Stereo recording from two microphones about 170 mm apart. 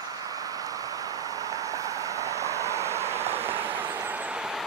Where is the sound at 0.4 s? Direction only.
20° right (ahead or behind).